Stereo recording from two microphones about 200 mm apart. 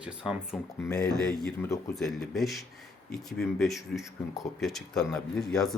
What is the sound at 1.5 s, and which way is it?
Speech, 15° left (ahead or behind).